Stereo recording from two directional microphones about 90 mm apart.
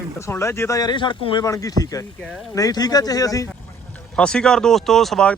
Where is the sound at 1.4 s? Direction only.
40° left (ahead or behind).